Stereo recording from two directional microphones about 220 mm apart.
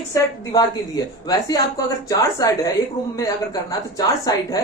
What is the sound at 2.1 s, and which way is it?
Speech, 15° left (ahead or behind).